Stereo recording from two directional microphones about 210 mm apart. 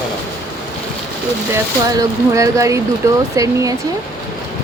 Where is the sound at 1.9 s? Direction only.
15° right (ahead or behind).